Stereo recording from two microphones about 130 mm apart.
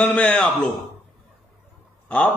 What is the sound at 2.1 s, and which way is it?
Speech, 10° left (ahead or behind).